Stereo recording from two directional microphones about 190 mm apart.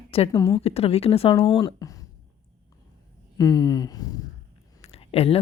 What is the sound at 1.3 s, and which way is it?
Speech, 20° left (ahead or behind).